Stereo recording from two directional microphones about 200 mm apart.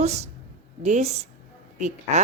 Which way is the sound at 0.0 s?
35° right (ahead or behind).